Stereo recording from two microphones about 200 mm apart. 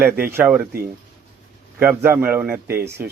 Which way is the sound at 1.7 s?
10° right (ahead or behind).